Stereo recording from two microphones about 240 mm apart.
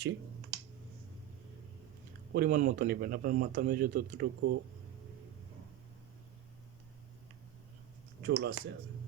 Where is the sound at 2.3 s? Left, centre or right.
Right.